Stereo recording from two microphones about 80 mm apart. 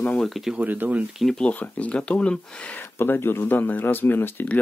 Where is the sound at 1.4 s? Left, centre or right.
Centre.